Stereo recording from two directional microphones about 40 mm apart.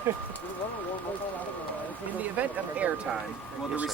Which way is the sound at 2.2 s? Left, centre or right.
Right.